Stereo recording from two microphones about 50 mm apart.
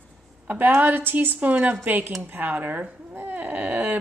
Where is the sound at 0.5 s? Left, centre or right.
Right.